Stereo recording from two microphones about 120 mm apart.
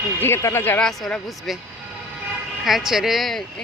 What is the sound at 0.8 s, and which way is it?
Speech, 5° left (ahead or behind).